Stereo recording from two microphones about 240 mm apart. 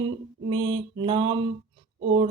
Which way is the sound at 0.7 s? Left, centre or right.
Right.